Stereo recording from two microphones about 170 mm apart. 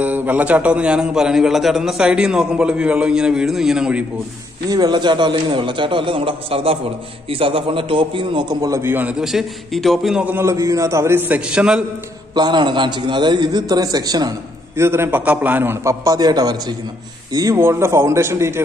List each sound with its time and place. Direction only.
0.0 s a man's voice: 10° right (ahead or behind)
4.6 s a man's voice: 25° right (ahead or behind); by 11.8 s 5° right (ahead or behind)
12.4 s a man's voice: 25° right (ahead or behind)